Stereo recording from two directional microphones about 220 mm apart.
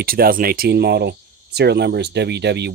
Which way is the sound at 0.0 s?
40° right (ahead or behind).